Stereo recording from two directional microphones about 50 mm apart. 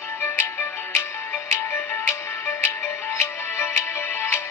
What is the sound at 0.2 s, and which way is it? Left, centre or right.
Music, left.